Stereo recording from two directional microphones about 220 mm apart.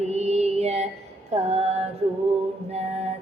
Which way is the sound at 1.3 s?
30° right (ahead or behind).